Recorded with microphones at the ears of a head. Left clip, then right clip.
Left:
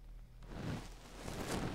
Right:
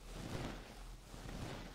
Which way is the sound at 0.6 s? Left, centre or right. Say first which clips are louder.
Left 8 dB; left.